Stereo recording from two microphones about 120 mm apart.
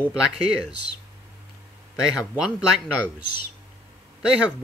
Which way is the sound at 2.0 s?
5° right (ahead or behind).